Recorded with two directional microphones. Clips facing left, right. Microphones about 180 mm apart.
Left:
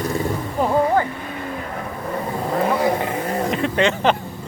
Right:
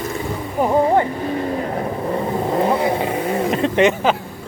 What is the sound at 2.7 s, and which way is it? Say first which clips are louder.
Vehicle: right 1 dB; 25° right (ahead or behind).